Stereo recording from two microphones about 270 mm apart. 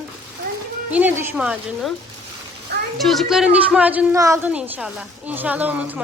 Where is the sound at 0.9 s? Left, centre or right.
Centre.